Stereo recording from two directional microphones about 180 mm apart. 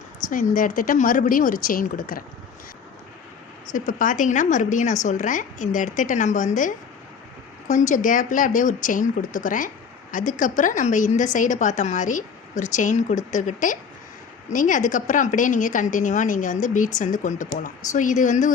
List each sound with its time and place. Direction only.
0.3 s a woman's voice: 50° left (ahead or behind)
3.7 s a woman's voice: 45° left (ahead or behind)